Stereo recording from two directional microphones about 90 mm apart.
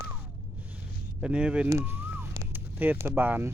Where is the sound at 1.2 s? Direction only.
10° right (ahead or behind).